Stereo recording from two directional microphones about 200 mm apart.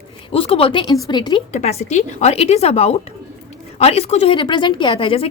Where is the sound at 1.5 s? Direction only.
35° left (ahead or behind).